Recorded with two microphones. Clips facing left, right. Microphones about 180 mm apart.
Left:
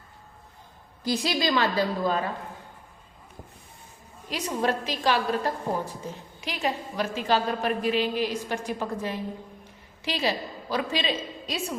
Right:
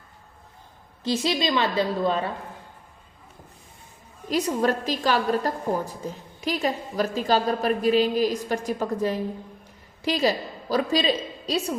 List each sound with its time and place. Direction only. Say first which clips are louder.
1.0 s a woman's voice: right 2 dB; 25° right (ahead or behind)
4.3 s a woman's voice: right 4 dB; 40° right (ahead or behind)